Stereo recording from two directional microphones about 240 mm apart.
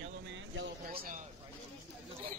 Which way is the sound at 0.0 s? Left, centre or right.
Right.